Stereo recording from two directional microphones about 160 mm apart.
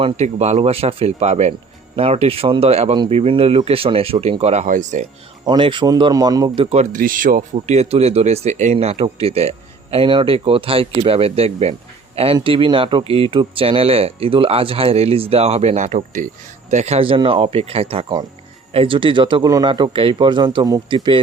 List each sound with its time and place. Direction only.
0.0 s speech: 45° right (ahead or behind)
5.5 s speech: 30° right (ahead or behind)
6.7 s speech: 45° right (ahead or behind)
7.0 s speech: 60° right (ahead or behind)
7.5 s speech: 40° right (ahead or behind)